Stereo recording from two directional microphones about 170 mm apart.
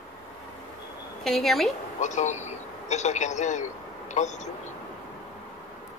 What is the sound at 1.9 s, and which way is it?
A man's voice, 45° left (ahead or behind).